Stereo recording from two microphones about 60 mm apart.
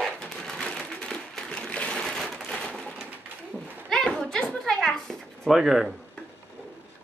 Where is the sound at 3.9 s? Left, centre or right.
Centre.